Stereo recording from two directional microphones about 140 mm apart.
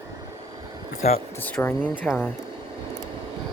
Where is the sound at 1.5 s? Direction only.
10° left (ahead or behind).